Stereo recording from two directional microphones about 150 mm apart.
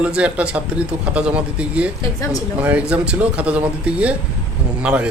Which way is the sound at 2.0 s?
20° left (ahead or behind).